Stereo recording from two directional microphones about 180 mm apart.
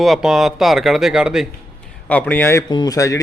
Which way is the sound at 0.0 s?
Centre (ahead or behind).